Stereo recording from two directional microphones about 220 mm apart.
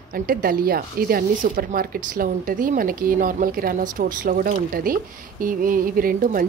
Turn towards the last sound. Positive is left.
turn(degrees=-40)  # may be behind; listen again after turning